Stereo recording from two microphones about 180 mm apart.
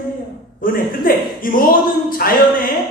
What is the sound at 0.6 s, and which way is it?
A woman's voice, 50° left (ahead or behind).